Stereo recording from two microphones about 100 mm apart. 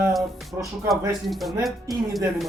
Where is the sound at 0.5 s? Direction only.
30° right (ahead or behind).